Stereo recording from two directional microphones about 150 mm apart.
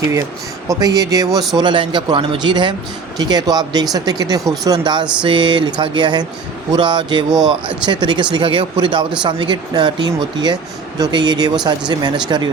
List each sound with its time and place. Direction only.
0.7 s speech: 25° right (ahead or behind)